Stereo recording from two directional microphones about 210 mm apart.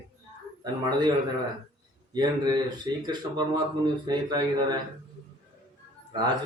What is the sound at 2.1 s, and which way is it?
A man's voice, 20° right (ahead or behind).